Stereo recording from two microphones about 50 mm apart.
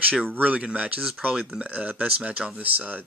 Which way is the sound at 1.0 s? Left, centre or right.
Centre.